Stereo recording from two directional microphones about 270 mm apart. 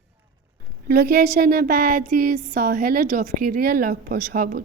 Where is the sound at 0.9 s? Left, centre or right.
Right.